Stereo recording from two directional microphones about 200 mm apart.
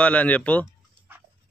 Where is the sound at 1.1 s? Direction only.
10° right (ahead or behind).